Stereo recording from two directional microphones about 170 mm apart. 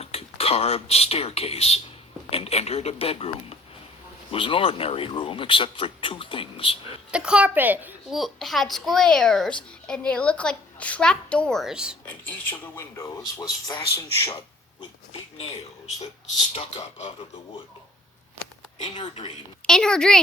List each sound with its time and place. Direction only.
0.0 s speech: 35° left (ahead or behind)
7.1 s a child's voice: 5° right (ahead or behind)
8.2 s a woman's voice: centre (ahead or behind)
12.0 s speech: 10° left (ahead or behind)
14.8 s pig: 35° left (ahead or behind)
18.9 s speech: 25° left (ahead or behind)
19.6 s a woman's voice: 5° left (ahead or behind)